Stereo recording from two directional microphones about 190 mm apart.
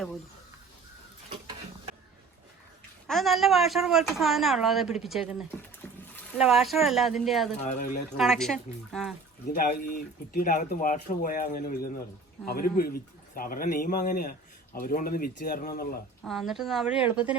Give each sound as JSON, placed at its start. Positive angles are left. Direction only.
{"t": 3.1, "sound": "speech", "side_deg": 0}
{"t": 5.8, "sound": "splash", "side_deg": 10}
{"t": 6.4, "sound": "speech", "side_deg": 0}
{"t": 7.6, "sound": "speech", "side_deg": 40}
{"t": 8.2, "sound": "speech", "side_deg": 0}
{"t": 9.6, "sound": "a man's voice", "side_deg": 50}
{"t": 16.2, "sound": "speech", "side_deg": 0}